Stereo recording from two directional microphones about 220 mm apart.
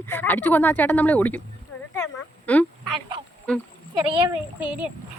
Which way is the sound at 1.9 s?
10° left (ahead or behind).